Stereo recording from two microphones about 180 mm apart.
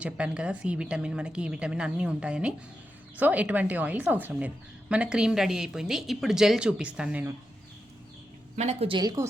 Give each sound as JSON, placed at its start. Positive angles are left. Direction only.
{"t": 0.0, "sound": "a woman's voice", "side_deg": -5}
{"t": 8.5, "sound": "a woman's voice", "side_deg": -35}